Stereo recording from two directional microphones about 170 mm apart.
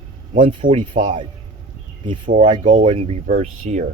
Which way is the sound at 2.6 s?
45° right (ahead or behind).